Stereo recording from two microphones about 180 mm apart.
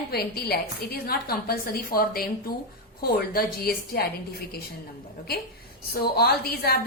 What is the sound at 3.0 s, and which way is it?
A woman's voice, 55° left (ahead or behind).